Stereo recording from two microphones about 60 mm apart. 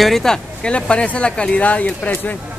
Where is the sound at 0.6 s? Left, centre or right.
Centre.